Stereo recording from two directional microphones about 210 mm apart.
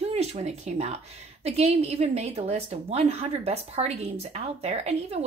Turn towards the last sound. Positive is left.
turn(degrees=-30)  # may be behind; listen again after turning